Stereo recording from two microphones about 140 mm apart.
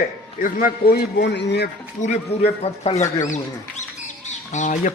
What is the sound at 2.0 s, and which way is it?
A man's voice, 55° left (ahead or behind).